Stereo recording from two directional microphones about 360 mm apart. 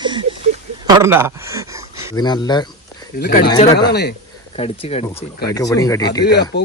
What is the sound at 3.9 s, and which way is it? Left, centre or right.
Speech, left.